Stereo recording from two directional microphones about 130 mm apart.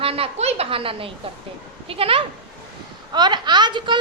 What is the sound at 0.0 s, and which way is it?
A woman's voice, 50° right (ahead or behind).